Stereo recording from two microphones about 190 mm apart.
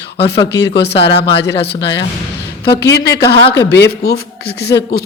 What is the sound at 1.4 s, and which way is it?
Speech, 60° left (ahead or behind).